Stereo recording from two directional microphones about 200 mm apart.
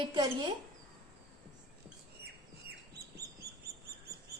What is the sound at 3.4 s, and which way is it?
Bird, 50° right (ahead or behind).